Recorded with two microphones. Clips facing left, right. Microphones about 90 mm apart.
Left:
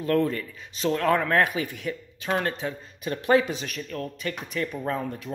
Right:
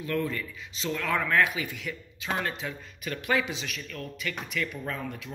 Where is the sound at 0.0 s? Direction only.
40° left (ahead or behind).